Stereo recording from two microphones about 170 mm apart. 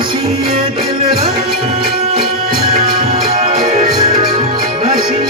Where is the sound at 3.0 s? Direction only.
35° right (ahead or behind).